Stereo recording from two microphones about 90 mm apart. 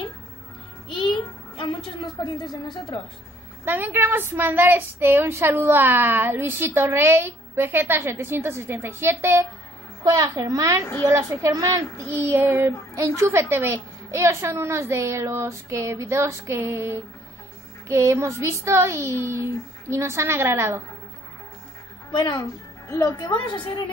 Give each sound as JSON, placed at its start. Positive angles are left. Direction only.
{"t": 0.8, "sound": "a sound", "side_deg": 65}
{"t": 2.2, "sound": "a woman's voice", "side_deg": 60}
{"t": 3.6, "sound": "a woman's voice", "side_deg": -20}
{"t": 10.0, "sound": "a child's voice", "side_deg": -40}
{"t": 12.1, "sound": "a child's voice", "side_deg": -25}
{"t": 22.1, "sound": "a woman's voice", "side_deg": 60}
{"t": 22.8, "sound": "a woman's voice", "side_deg": 40}
{"t": 23.4, "sound": "a woman's voice", "side_deg": 60}